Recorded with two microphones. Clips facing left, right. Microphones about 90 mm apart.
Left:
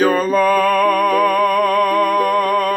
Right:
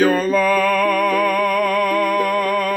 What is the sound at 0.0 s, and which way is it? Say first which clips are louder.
Music: left 1 dB; 45° left (ahead or behind).